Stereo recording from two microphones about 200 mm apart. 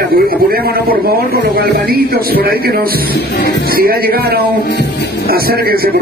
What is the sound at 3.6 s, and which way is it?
Music, 50° right (ahead or behind).